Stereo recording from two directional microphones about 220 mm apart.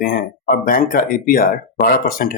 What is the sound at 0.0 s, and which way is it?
Speech, 40° left (ahead or behind).